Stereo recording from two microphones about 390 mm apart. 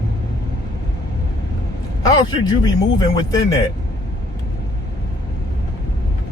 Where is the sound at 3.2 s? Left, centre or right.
Centre.